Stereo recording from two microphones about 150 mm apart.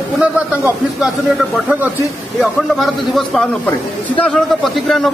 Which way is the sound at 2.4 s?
Centre (ahead or behind).